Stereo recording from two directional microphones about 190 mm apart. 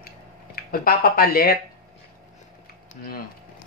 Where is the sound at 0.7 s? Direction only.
50° left (ahead or behind).